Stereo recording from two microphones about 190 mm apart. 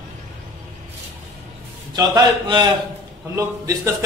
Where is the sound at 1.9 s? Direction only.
20° right (ahead or behind).